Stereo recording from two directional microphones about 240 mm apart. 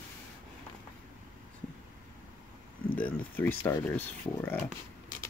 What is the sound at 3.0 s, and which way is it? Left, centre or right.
Speech, centre.